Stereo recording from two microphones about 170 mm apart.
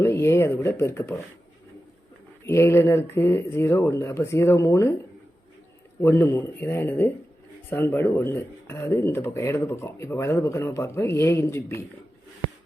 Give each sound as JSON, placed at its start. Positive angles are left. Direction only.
{"t": 0.0, "sound": "speech", "side_deg": 15}
{"t": 2.5, "sound": "speech", "side_deg": 15}
{"t": 6.0, "sound": "speech", "side_deg": 15}